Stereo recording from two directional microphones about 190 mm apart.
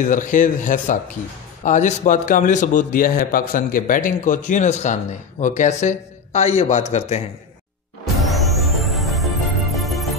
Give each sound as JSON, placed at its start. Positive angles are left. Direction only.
{"t": 0.0, "sound": "a man's voice", "side_deg": 40}
{"t": 8.2, "sound": "music", "side_deg": 0}